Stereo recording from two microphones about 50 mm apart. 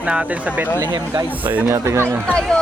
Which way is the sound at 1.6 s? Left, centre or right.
Right.